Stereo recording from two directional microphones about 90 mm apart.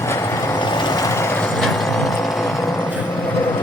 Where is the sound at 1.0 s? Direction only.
30° left (ahead or behind).